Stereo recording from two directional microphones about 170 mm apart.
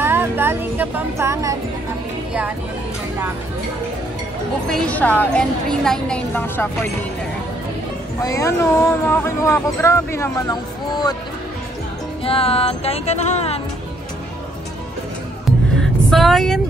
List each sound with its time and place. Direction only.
0.0 s speech: 15° right (ahead or behind)
4.6 s speech: 5° left (ahead or behind)
8.2 s speech: 20° left (ahead or behind)
12.3 s music: 35° left (ahead or behind)
16.1 s speech: centre (ahead or behind)